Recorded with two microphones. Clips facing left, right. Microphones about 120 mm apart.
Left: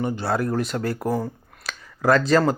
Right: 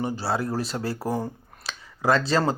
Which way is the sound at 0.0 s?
30° right (ahead or behind).